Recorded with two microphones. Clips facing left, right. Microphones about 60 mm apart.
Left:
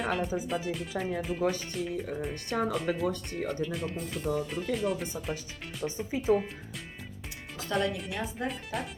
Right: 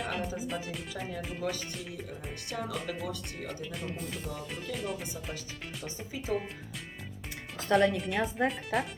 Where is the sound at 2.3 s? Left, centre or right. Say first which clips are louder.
Left 5 dB; left.